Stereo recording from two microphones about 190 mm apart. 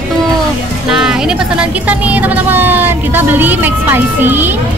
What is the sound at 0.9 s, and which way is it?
Speech, 5° right (ahead or behind).